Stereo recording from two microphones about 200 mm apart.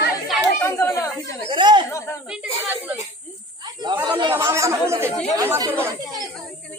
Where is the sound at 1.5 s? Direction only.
25° right (ahead or behind).